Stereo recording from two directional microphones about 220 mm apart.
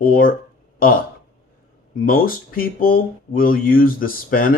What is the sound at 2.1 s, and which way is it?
Speech, 40° left (ahead or behind).